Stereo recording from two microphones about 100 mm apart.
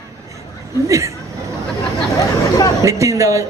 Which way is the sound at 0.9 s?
30° right (ahead or behind).